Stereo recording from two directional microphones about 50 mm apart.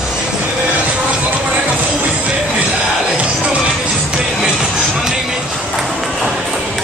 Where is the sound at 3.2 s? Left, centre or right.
Right.